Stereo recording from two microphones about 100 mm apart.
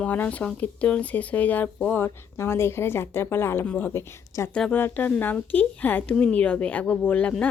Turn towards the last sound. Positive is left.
turn(degrees=15)  # may be behind; listen again after turning